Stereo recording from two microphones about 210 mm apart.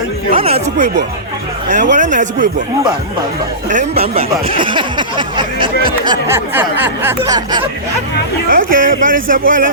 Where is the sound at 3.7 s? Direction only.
30° right (ahead or behind).